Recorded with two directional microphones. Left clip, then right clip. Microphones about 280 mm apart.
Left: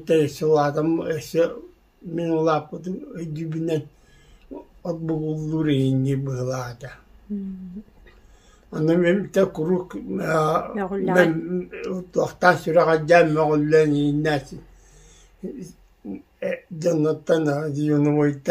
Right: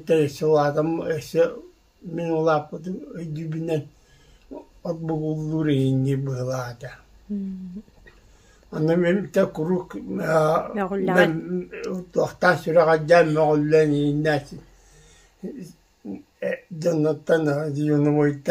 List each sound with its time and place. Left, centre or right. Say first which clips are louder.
0.0 s speech: left 1 dB; centre
4.8 s speech: even; centre
8.6 s speech: left 1 dB; centre
10.7 s speech: even; centre
11.4 s speech: left 1 dB; centre
16.3 s speech: even; centre